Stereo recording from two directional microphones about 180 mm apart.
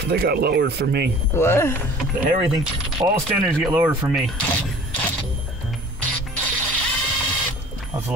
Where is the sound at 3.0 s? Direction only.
20° right (ahead or behind).